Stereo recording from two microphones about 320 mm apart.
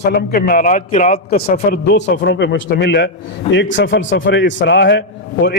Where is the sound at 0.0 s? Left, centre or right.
Left.